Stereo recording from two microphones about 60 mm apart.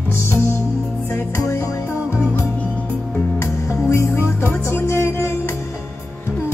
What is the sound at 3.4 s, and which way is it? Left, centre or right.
Music, left.